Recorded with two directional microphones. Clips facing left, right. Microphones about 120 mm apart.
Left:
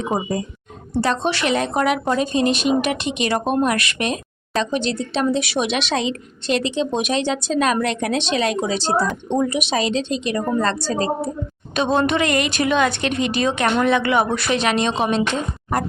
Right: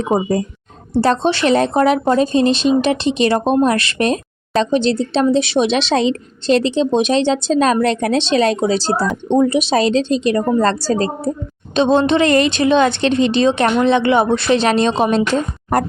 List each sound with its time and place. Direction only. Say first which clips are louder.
1.0 s speech: right 6 dB; 30° right (ahead or behind)
11.7 s a woman's voice: right 5 dB; 25° right (ahead or behind)